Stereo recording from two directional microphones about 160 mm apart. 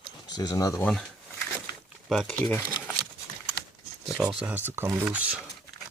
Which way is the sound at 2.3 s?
10° left (ahead or behind).